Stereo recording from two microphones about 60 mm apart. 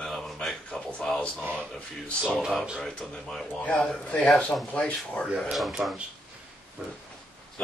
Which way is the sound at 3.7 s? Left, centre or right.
Centre.